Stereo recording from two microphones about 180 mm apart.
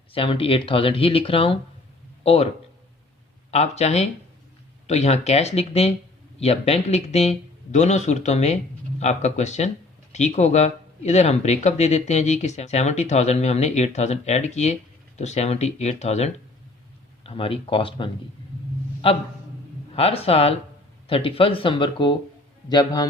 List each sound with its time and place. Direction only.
0.1 s speech: 30° left (ahead or behind)
3.5 s speech: 35° left (ahead or behind)